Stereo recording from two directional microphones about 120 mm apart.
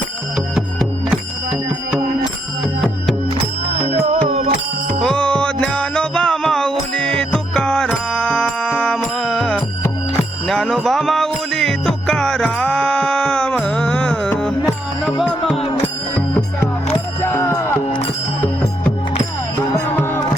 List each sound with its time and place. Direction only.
3.2 s music: 55° right (ahead or behind)
5.0 s music: 10° left (ahead or behind)
16.9 s music: 20° left (ahead or behind)